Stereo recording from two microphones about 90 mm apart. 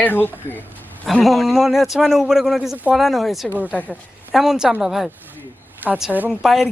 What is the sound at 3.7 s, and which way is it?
Speech, 15° left (ahead or behind).